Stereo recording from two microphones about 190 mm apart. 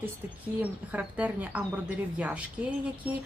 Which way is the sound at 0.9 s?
10° right (ahead or behind).